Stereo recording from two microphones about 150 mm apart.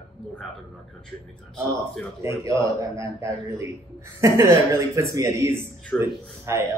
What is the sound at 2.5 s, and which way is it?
Speech, 20° right (ahead or behind).